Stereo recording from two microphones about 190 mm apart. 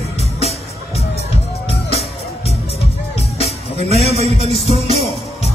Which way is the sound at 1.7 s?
30° left (ahead or behind).